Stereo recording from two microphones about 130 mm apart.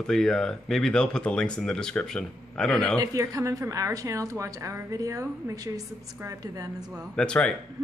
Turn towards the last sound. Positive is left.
turn(degrees=5)  # may be behind; listen again after turning